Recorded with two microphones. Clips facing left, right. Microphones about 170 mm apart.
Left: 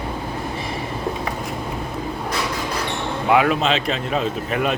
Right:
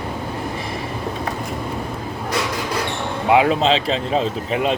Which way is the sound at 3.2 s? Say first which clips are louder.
Right 2 dB; 25° right (ahead or behind).